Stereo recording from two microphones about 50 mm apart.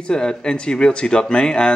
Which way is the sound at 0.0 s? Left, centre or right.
Centre.